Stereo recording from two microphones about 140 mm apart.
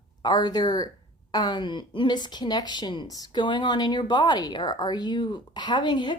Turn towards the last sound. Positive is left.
turn(degrees=35)  # may be behind; listen again after turning